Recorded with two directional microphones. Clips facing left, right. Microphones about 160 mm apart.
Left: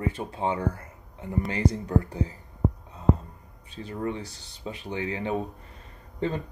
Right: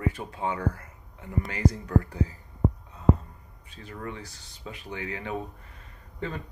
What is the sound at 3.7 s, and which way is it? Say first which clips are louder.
Speech: left 7 dB; 30° left (ahead or behind).